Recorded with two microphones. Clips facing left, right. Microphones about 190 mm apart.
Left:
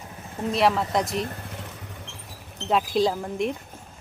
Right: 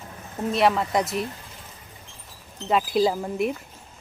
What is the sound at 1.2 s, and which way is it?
Vehicle, 60° left (ahead or behind).